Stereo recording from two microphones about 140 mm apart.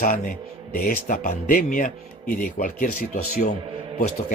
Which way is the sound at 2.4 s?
90° left.